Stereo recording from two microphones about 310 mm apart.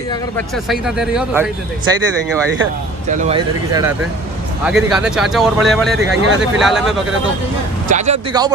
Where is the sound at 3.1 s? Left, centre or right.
Right.